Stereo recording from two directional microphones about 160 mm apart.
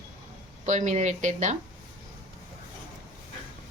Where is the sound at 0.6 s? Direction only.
50° right (ahead or behind).